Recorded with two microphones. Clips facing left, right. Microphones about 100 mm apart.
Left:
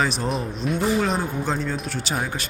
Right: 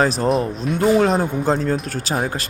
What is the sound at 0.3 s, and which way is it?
Speech, centre (ahead or behind).